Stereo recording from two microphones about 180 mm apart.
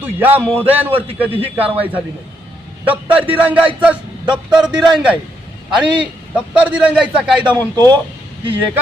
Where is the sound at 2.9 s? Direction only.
10° right (ahead or behind).